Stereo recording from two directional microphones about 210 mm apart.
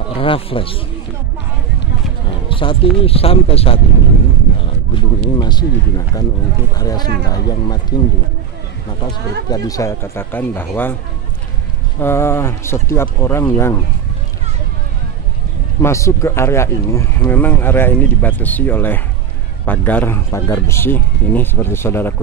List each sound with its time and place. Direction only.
0.2 s speech: 25° left (ahead or behind)
2.5 s speech: 25° left (ahead or behind)
9.5 s speech: 15° left (ahead or behind)
12.0 s speech: 10° left (ahead or behind)
15.8 s speech: 15° left (ahead or behind)